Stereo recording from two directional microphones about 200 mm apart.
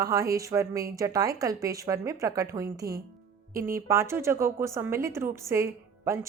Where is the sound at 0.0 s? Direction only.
15° right (ahead or behind).